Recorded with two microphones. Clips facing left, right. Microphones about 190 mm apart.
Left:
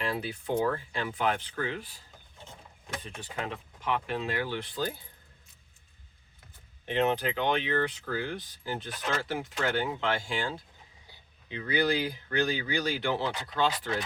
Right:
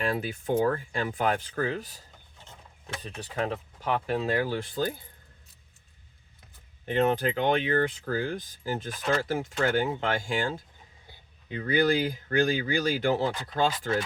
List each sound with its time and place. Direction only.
0.0 s speech: 45° right (ahead or behind)
3.0 s speech: 35° right (ahead or behind)
6.8 s speech: 45° right (ahead or behind)